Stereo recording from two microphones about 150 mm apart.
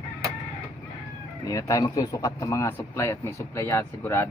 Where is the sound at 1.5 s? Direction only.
20° left (ahead or behind).